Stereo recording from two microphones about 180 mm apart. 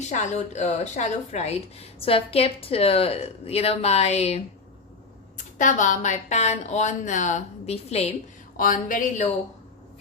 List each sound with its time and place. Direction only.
0.1 s a woman's voice: 40° left (ahead or behind)
8.5 s speech: 50° left (ahead or behind)